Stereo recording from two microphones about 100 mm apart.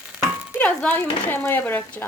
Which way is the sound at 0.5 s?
15° left (ahead or behind).